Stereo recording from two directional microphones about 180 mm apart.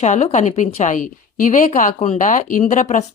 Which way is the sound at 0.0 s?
40° left (ahead or behind).